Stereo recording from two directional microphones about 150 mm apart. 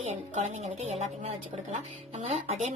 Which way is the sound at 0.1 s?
50° right (ahead or behind).